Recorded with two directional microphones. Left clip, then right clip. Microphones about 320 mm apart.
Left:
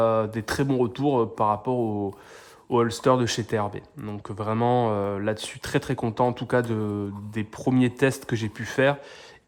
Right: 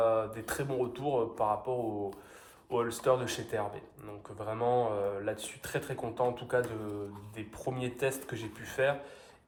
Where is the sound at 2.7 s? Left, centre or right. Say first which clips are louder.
Left 8 dB; left.